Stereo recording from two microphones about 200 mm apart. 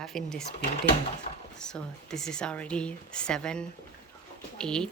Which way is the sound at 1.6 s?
5° left (ahead or behind).